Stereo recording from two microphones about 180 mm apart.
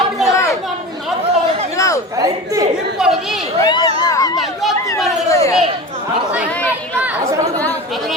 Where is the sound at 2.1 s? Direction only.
15° right (ahead or behind).